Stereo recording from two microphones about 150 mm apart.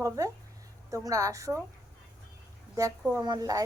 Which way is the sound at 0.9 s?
20° right (ahead or behind).